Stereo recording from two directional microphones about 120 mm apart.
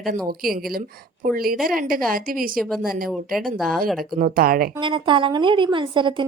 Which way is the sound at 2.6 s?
Centre (ahead or behind).